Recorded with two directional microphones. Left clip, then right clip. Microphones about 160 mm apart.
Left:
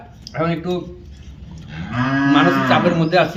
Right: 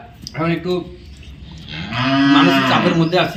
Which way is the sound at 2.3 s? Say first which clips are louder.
Even; 15° left (ahead or behind).